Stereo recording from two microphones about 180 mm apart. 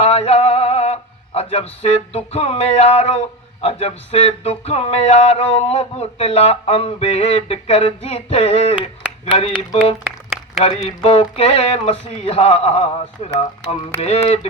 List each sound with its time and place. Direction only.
0.0 s male singing: 35° left (ahead or behind)
13.9 s speech: 10° left (ahead or behind)